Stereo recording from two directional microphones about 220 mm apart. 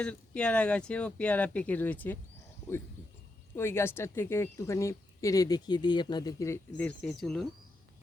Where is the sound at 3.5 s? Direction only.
10° left (ahead or behind).